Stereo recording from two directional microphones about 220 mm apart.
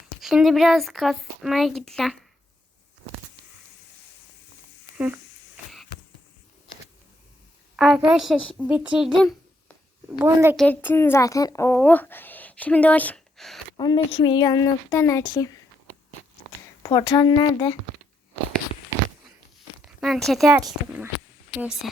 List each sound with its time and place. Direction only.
0.2 s speech: centre (ahead or behind)
4.9 s speech: 5° right (ahead or behind)
7.8 s a child's voice: 5° right (ahead or behind)
10.6 s speech: 10° left (ahead or behind)
13.7 s speech: 20° left (ahead or behind)
16.8 s speech: 20° left (ahead or behind)
19.8 s a sound: centre (ahead or behind)
20.6 s speech: 15° right (ahead or behind)